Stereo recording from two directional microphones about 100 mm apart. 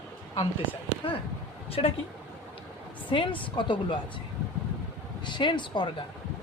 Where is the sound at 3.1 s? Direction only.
55° left (ahead or behind).